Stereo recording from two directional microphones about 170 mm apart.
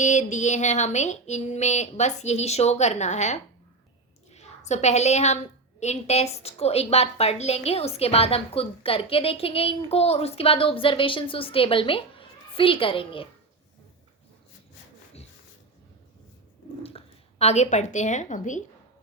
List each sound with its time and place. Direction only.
0.0 s a sound: 45° left (ahead or behind)
4.3 s a woman's voice: 40° left (ahead or behind)
16.8 s a woman's voice: 35° left (ahead or behind)